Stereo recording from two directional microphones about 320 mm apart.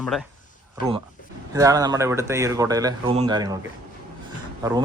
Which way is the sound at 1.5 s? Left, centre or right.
Centre.